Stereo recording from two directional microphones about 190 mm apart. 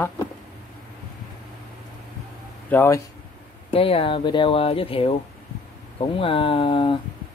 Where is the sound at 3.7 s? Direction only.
30° left (ahead or behind).